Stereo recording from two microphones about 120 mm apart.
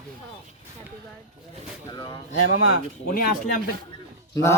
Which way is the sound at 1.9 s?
40° left (ahead or behind).